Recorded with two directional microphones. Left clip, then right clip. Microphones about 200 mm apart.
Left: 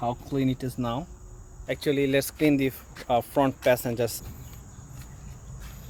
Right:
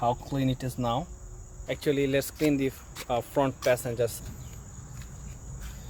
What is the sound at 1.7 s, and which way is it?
Speech, 25° left (ahead or behind).